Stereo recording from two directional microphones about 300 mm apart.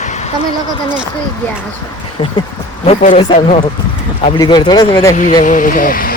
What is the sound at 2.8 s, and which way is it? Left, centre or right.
Speech, left.